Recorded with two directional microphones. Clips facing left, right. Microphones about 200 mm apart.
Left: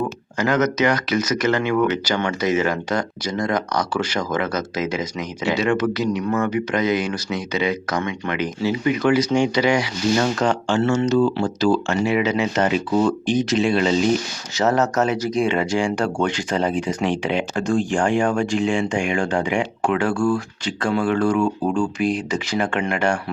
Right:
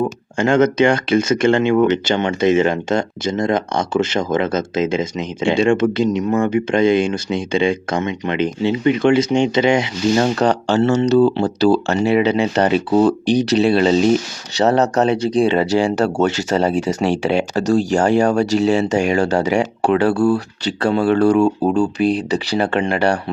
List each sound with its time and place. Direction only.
0.0 s speech: 25° right (ahead or behind)